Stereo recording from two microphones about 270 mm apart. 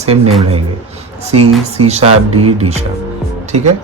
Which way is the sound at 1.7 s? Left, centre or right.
Right.